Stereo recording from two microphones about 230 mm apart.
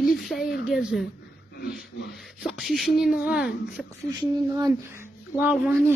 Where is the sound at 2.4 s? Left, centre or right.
Centre.